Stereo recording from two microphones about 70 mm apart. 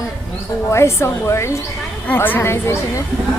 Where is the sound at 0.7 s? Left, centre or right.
Left.